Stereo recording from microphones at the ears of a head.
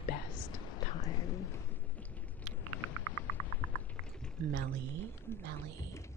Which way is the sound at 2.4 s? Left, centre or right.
Right.